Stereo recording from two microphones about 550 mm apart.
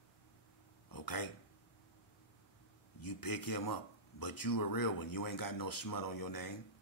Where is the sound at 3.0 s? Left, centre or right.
Left.